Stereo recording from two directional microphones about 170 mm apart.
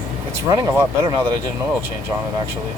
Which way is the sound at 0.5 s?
25° right (ahead or behind).